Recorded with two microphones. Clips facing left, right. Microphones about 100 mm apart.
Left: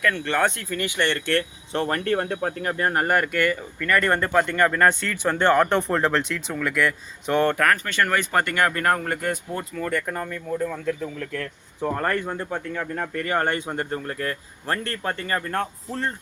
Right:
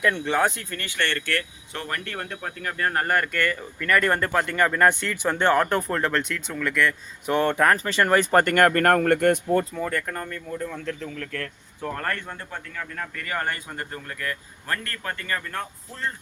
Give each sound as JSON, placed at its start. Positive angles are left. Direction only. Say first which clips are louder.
{"t": 0.0, "sound": "speech", "louder": "even", "side_deg": -20}
{"t": 0.3, "sound": "speech", "louder": "even", "side_deg": 0}
{"t": 0.7, "sound": "speech", "louder": "left 4 dB", "side_deg": 15}
{"t": 2.6, "sound": "speech", "louder": "left 1 dB", "side_deg": 20}
{"t": 3.8, "sound": "speech", "louder": "even", "side_deg": 0}
{"t": 5.7, "sound": "speech", "louder": "left 3 dB", "side_deg": 0}
{"t": 7.5, "sound": "speech", "louder": "right 1 dB", "side_deg": -25}
{"t": 8.5, "sound": "speech", "louder": "right 3 dB", "side_deg": -55}
{"t": 10.1, "sound": "speech", "louder": "left 3 dB", "side_deg": 10}
{"t": 11.2, "sound": "speech", "louder": "left 2 dB", "side_deg": 20}
{"t": 12.3, "sound": "speech", "louder": "left 7 dB", "side_deg": 20}
{"t": 15.4, "sound": "speech", "louder": "left 6 dB", "side_deg": 45}